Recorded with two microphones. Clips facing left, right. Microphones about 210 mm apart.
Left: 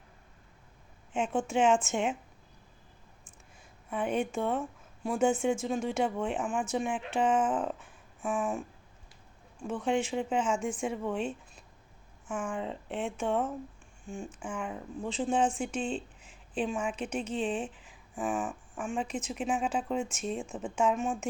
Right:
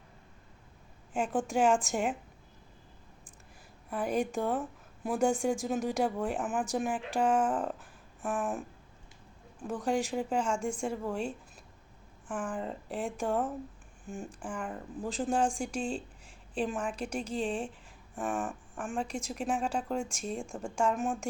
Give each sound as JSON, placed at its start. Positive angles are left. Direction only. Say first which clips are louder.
{"t": 1.1, "sound": "speech", "louder": "left 1 dB", "side_deg": 0}
{"t": 3.8, "sound": "a woman's voice", "louder": "even", "side_deg": 0}
{"t": 9.8, "sound": "speech", "louder": "left 1 dB", "side_deg": 0}